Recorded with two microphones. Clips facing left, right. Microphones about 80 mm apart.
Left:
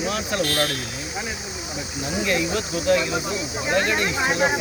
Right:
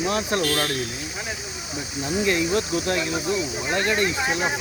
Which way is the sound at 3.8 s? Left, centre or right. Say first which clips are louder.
Even; left.